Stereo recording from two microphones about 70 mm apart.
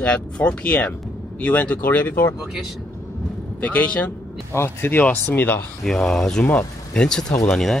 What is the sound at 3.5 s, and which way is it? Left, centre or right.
Speech, left.